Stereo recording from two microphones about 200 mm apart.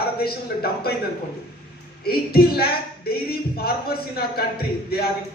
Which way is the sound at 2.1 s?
50° left (ahead or behind).